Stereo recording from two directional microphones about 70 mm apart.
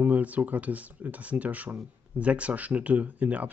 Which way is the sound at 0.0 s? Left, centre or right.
Right.